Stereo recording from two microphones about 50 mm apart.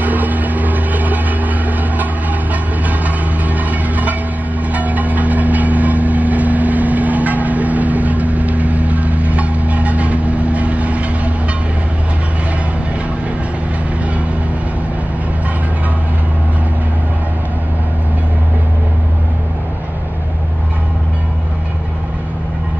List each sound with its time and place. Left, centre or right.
0.0 s vehicle: right
2.5 s a sound: right
4.7 s vehicle: right